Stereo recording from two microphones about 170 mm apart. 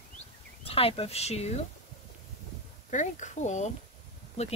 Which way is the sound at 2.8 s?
45° left (ahead or behind).